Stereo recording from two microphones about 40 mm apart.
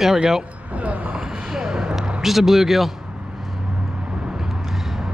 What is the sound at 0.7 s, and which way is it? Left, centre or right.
Speech, right.